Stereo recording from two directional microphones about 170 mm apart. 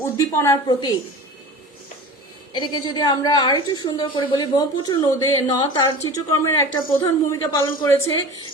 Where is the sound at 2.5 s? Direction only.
25° left (ahead or behind).